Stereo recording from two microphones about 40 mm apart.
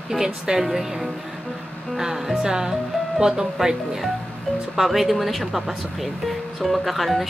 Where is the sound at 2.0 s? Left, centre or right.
Centre.